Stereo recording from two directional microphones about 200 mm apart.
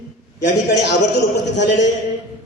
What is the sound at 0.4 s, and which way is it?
Speech, 55° left (ahead or behind).